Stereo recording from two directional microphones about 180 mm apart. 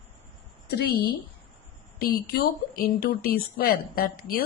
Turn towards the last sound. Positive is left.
turn(degrees=55)  # may be behind; listen again after turning